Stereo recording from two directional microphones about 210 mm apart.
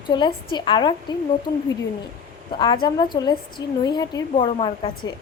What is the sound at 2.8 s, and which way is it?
A woman's voice, 20° left (ahead or behind).